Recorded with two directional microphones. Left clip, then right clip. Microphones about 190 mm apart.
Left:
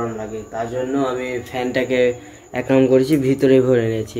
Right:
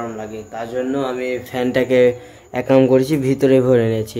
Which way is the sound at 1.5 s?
40° right (ahead or behind).